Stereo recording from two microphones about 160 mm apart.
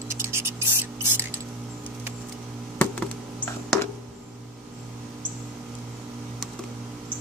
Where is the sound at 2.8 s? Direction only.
5° left (ahead or behind).